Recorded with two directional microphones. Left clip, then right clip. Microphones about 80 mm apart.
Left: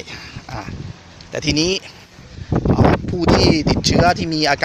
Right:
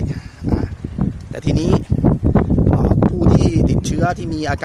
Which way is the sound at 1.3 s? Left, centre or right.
Right.